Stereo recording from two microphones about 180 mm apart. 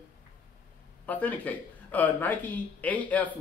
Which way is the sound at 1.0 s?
10° left (ahead or behind).